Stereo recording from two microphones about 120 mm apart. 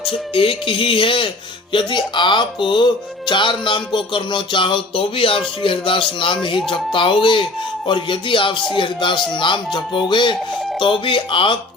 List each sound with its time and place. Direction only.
0.0 s speech: 50° left (ahead or behind)